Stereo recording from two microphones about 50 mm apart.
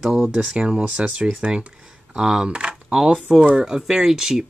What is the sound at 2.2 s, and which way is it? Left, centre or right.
Speech, centre.